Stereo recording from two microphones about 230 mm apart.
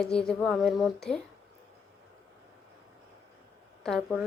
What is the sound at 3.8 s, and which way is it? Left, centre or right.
Speech, centre.